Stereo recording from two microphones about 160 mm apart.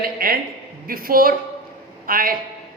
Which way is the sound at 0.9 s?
65° right (ahead or behind).